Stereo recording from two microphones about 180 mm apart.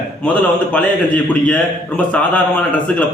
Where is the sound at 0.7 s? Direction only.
5° left (ahead or behind).